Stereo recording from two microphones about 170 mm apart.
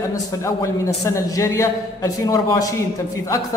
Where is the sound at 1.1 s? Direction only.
20° left (ahead or behind).